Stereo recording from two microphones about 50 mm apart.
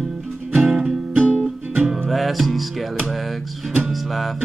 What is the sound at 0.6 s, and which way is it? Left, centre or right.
Music, centre.